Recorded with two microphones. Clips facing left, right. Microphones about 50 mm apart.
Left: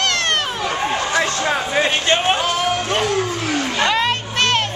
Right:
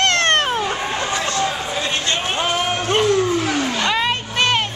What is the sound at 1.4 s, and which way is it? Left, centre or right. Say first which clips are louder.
Vehicle: left 3 dB; left.